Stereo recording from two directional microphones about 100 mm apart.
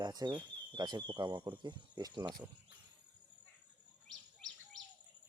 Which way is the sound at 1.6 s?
45° right (ahead or behind).